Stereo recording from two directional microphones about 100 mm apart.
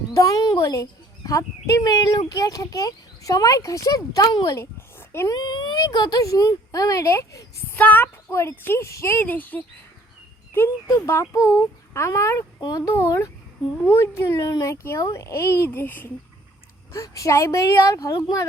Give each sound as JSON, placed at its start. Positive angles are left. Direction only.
{"t": 0.1, "sound": "a child's voice", "side_deg": 35}
{"t": 4.5, "sound": "dog", "side_deg": 25}
{"t": 5.3, "sound": "speech", "side_deg": 45}
{"t": 7.8, "sound": "a woman's voice", "side_deg": 15}
{"t": 10.8, "sound": "a woman's voice", "side_deg": 30}
{"t": 12.5, "sound": "speech", "side_deg": 45}
{"t": 12.8, "sound": "a woman's voice", "side_deg": 30}
{"t": 16.9, "sound": "a child's voice", "side_deg": 30}